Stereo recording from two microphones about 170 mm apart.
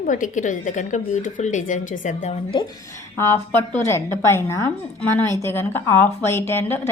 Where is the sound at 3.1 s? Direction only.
15° left (ahead or behind).